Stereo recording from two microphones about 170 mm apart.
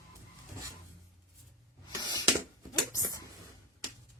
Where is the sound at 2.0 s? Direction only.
25° left (ahead or behind).